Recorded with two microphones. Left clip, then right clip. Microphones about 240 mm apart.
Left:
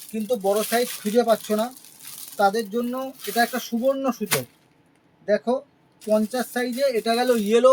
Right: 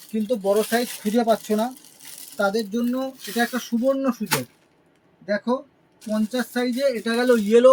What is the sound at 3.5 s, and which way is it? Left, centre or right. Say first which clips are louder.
Speech: even; left.